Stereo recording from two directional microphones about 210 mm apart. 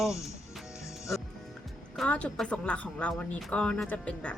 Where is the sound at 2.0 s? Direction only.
5° left (ahead or behind).